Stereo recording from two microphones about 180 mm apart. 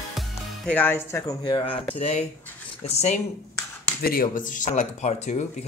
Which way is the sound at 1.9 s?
35° left (ahead or behind).